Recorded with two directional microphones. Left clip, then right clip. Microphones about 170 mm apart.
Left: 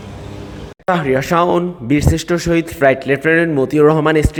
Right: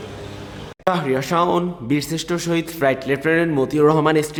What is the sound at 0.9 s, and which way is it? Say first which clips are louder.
Speech: left 4 dB; 20° left (ahead or behind).